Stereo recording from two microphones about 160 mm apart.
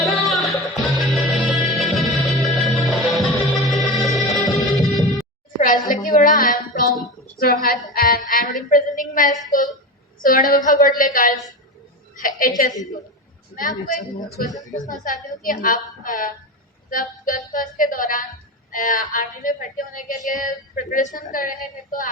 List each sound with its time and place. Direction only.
0.0 s music: centre (ahead or behind)
5.5 s a sound: 55° left (ahead or behind)
5.9 s child singing: 60° left (ahead or behind)
10.2 s speech: 60° left (ahead or behind)
14.8 s speech: 55° left (ahead or behind)